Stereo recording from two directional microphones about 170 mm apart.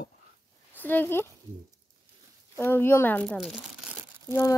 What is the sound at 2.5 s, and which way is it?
Speech, 15° left (ahead or behind).